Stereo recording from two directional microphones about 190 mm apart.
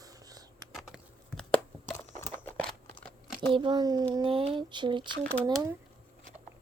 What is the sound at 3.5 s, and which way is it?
Speech, 25° right (ahead or behind).